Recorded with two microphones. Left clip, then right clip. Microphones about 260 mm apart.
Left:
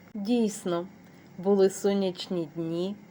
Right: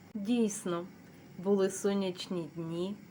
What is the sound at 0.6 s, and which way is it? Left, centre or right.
Speech, centre.